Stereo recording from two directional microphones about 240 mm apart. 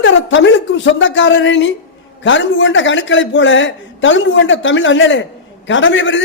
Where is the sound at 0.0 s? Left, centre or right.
Left.